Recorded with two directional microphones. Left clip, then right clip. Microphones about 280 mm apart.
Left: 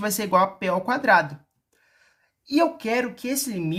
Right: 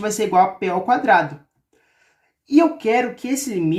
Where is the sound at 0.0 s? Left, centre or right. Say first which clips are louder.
Right 4 dB; left.